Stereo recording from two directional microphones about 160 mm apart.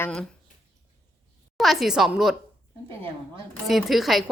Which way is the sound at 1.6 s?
Centre (ahead or behind).